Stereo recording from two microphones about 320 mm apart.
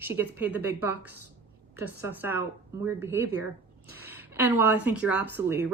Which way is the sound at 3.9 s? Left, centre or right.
Centre.